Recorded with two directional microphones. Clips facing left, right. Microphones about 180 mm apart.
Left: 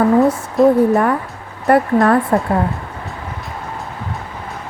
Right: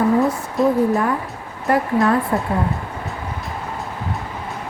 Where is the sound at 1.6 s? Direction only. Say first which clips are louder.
Left 4 dB; 60° left (ahead or behind).